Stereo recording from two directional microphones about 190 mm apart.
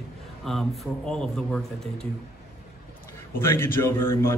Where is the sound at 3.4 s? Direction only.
10° left (ahead or behind).